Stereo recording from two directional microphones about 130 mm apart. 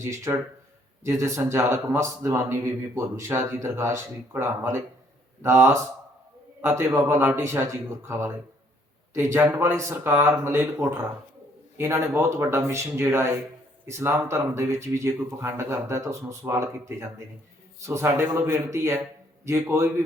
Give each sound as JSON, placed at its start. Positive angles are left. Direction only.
{"t": 0.0, "sound": "speech", "side_deg": -20}
{"t": 17.7, "sound": "speech", "side_deg": -20}